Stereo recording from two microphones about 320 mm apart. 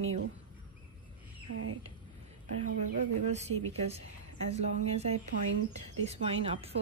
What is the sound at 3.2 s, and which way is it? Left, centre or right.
A woman's voice, right.